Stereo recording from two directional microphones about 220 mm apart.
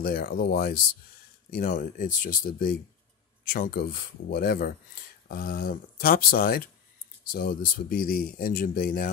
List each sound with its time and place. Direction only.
0.0 s speech: 40° left (ahead or behind)